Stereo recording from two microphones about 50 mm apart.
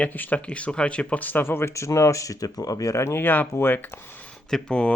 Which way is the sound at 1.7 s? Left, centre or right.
Left.